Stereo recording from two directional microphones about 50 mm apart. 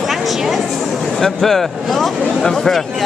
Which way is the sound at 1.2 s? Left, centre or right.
Centre.